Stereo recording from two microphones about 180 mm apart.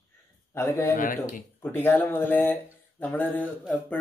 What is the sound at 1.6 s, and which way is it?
Speech, 10° left (ahead or behind).